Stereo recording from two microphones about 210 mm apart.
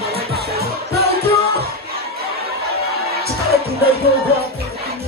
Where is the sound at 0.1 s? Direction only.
50° right (ahead or behind).